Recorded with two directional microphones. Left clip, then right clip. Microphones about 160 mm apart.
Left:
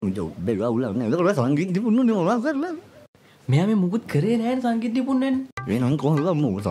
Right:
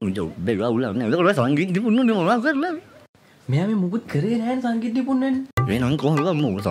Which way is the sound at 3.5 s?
20° left (ahead or behind).